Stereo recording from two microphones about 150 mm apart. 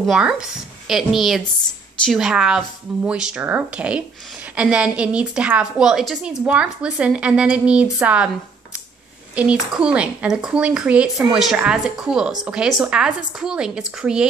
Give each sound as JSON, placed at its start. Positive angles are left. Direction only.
{"t": 0.0, "sound": "a woman's voice", "side_deg": 0}
{"t": 9.3, "sound": "a woman's voice", "side_deg": -10}